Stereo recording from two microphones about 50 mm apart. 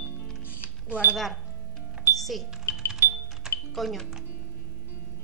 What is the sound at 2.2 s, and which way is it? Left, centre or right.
Speech, centre.